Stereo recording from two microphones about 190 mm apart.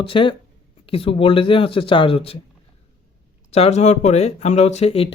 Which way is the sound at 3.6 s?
35° left (ahead or behind).